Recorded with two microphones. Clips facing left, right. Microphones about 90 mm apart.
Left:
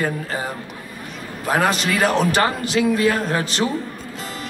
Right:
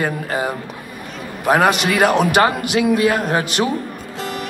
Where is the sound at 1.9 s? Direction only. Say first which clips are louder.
Right 4 dB; 65° right (ahead or behind).